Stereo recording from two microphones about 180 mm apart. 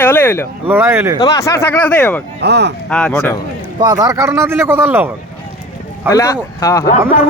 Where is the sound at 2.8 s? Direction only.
5° left (ahead or behind).